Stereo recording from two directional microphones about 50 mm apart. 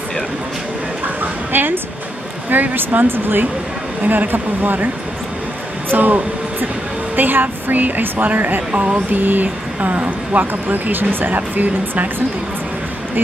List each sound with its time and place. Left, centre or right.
1.0 s a sound: right
2.5 s a woman's voice: right
5.9 s a woman's voice: right